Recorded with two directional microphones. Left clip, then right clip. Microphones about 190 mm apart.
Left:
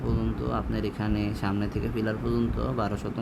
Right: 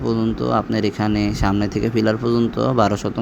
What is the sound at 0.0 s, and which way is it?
Speech, 30° right (ahead or behind).